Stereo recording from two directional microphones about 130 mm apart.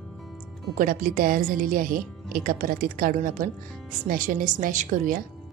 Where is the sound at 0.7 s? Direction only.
90° right.